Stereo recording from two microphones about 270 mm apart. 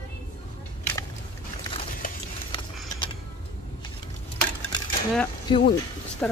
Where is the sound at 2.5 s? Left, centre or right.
Centre.